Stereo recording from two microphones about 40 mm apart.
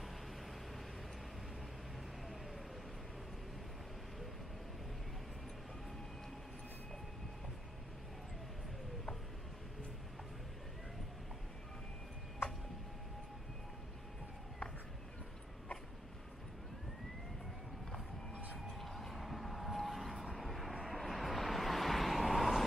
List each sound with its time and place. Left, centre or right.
18.7 s vehicle: centre